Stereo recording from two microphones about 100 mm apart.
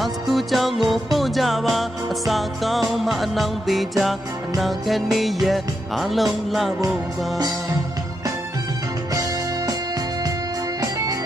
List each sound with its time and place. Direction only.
0.0 s music: centre (ahead or behind)
10.8 s music: 35° right (ahead or behind)